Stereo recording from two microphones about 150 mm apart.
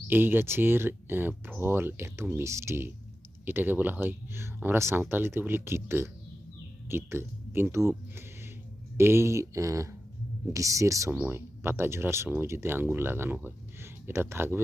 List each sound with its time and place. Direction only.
0.1 s speech: 15° right (ahead or behind)